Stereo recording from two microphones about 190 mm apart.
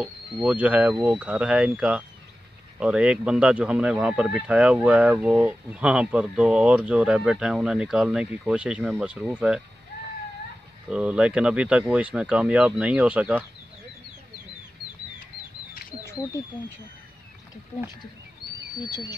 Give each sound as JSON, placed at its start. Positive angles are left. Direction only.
{"t": 0.0, "sound": "speech", "side_deg": -5}
{"t": 10.9, "sound": "speech", "side_deg": -5}
{"t": 16.1, "sound": "speech", "side_deg": 15}
{"t": 17.7, "sound": "speech", "side_deg": 15}